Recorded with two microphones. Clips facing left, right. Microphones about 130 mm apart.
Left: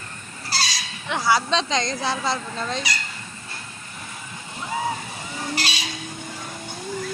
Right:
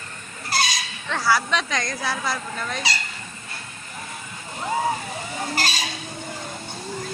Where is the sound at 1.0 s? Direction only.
15° left (ahead or behind).